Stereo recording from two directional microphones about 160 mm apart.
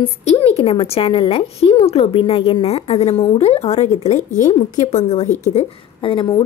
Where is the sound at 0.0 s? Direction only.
40° left (ahead or behind).